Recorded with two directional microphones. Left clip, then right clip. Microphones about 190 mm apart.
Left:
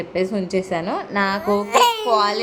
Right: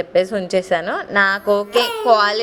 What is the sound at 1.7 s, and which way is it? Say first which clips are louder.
Speech: left 2 dB; 65° left (ahead or behind).